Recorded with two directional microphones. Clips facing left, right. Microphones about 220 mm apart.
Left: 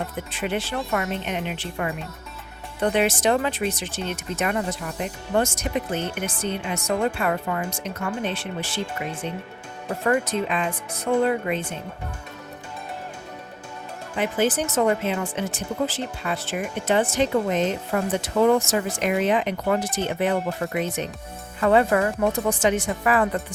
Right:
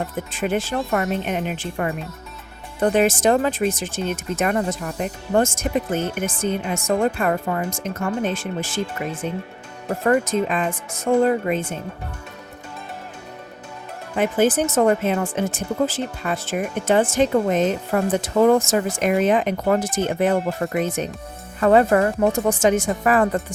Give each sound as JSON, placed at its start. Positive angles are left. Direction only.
{"t": 0.3, "sound": "speech", "side_deg": -45}
{"t": 10.1, "sound": "speech", "side_deg": -45}
{"t": 14.2, "sound": "speech", "side_deg": -50}